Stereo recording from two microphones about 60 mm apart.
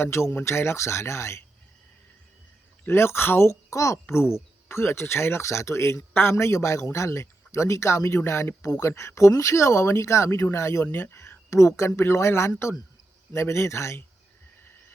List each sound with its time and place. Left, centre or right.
0.0 s speech: left
2.8 s speech: left
4.1 s speech: left
8.2 s speech: left
8.6 s speech: left
8.9 s speech: left
10.8 s speech: left
11.1 s speech: left